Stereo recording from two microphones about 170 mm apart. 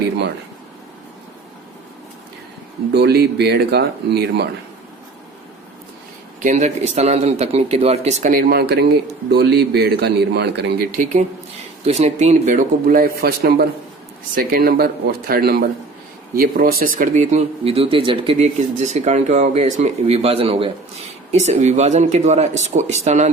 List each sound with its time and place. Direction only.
2.9 s speech: 75° right (ahead or behind)
6.4 s speech: 45° right (ahead or behind); by 10.8 s 80° right
10.9 s speech: 50° right (ahead or behind)